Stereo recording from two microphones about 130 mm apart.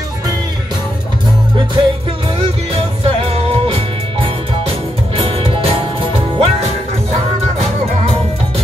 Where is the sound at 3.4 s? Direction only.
50° right (ahead or behind).